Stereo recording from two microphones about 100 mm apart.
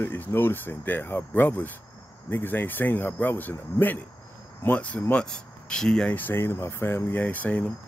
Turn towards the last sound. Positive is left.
turn(degrees=15)  # may be behind; listen again after turning